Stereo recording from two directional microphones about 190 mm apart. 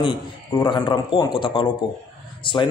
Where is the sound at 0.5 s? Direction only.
20° left (ahead or behind).